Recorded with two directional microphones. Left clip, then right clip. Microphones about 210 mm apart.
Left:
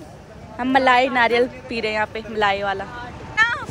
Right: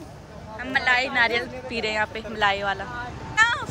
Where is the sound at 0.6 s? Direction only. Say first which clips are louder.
Left 6 dB; centre (ahead or behind).